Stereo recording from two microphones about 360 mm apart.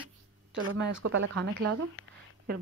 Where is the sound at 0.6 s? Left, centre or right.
Right.